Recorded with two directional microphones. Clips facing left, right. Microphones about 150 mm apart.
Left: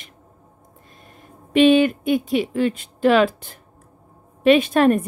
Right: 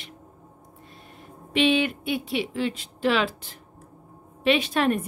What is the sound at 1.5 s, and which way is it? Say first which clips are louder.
A woman's voice: left 8 dB; 45° left (ahead or behind).